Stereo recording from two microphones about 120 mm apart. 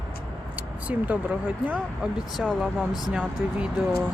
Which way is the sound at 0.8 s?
10° right (ahead or behind).